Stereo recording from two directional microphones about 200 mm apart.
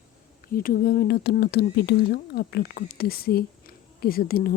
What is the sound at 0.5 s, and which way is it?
Speech, 45° left (ahead or behind).